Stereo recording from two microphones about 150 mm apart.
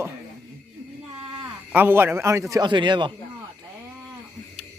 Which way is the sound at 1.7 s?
15° right (ahead or behind).